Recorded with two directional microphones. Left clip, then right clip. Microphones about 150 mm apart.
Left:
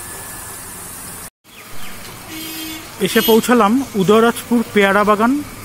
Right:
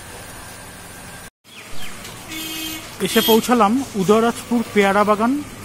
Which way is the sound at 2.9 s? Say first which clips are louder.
Left 2 dB; 10° left (ahead or behind).